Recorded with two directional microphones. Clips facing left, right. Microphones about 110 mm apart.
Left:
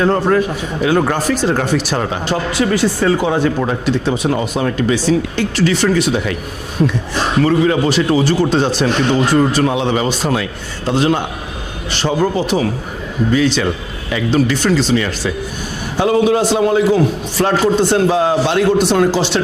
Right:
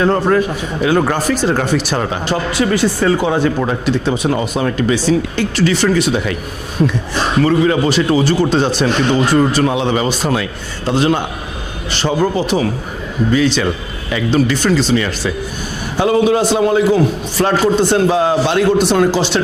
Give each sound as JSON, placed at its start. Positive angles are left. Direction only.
{"t": 0.0, "sound": "speech", "side_deg": -20}
{"t": 5.6, "sound": "a man's voice", "side_deg": -15}